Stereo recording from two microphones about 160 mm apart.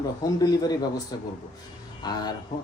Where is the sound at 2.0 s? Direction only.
25° left (ahead or behind).